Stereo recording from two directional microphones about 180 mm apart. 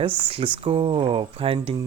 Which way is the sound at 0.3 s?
30° right (ahead or behind).